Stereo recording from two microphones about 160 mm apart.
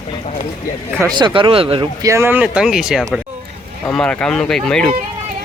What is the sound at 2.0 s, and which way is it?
Speech, 15° right (ahead or behind).